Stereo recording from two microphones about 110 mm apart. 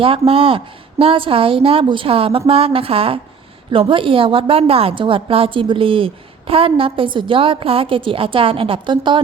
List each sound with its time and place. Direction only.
0.0 s a woman's voice: 55° right (ahead or behind)